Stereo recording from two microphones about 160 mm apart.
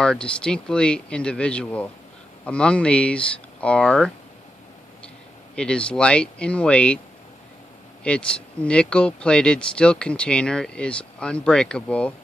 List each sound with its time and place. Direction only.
0.0 s speech: 5° left (ahead or behind)
5.6 s speech: 5° left (ahead or behind)
8.0 s speech: 5° left (ahead or behind)